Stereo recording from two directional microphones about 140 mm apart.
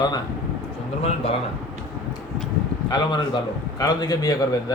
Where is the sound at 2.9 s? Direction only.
30° left (ahead or behind).